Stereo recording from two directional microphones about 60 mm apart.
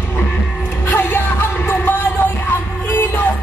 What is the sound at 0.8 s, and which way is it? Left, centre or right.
Music, left.